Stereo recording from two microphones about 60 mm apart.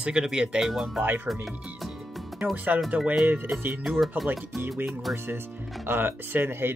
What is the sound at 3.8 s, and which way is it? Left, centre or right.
Speech, centre.